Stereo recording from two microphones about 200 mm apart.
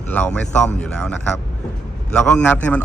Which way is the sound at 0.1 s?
5° left (ahead or behind).